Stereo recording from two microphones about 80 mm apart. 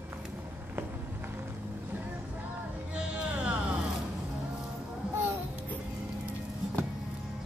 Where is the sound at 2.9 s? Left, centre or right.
Centre.